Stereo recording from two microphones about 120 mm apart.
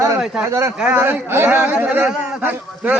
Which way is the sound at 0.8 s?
10° right (ahead or behind).